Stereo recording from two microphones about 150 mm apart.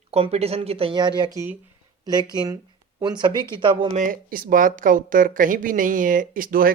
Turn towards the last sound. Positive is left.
turn(degrees=-70)  # may be behind; listen again after turning